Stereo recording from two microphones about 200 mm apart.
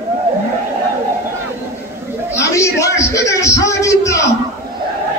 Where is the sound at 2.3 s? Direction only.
15° left (ahead or behind).